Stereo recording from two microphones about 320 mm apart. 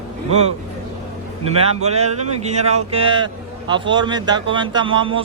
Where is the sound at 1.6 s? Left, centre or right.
Centre.